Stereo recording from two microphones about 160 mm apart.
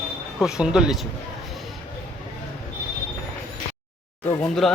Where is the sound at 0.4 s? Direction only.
5° right (ahead or behind).